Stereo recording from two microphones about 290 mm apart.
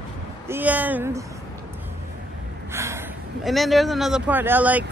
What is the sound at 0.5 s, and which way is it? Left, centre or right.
Speech, centre.